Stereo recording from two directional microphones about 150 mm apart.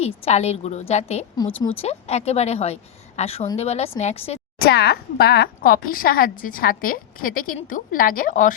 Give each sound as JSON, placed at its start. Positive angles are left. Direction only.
{"t": 0.0, "sound": "a woman's voice", "side_deg": 45}
{"t": 1.5, "sound": "speech", "side_deg": 15}
{"t": 1.8, "sound": "a woman's voice", "side_deg": 45}
{"t": 4.6, "sound": "speech", "side_deg": 90}